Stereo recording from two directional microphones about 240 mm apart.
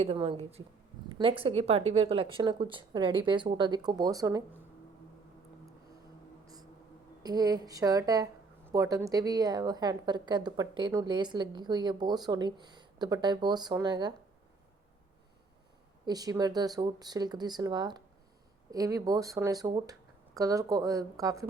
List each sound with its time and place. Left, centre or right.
0.1 s a woman's voice: right
7.2 s a woman's voice: centre
16.0 s a woman's voice: centre